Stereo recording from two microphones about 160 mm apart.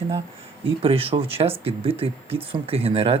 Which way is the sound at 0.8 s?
35° right (ahead or behind).